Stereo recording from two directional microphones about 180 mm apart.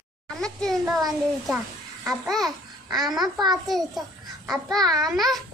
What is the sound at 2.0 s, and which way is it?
A child's voice, centre (ahead or behind).